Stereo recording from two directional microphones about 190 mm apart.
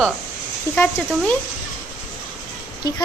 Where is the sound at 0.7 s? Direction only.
15° left (ahead or behind).